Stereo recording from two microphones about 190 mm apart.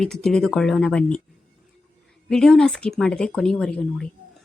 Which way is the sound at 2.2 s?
5° left (ahead or behind).